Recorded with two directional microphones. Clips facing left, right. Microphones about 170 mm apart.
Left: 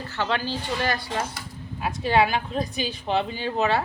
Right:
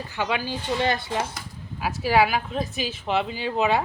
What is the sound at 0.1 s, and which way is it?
Speech, 10° right (ahead or behind).